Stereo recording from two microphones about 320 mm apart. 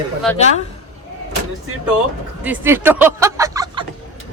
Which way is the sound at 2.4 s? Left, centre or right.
Centre.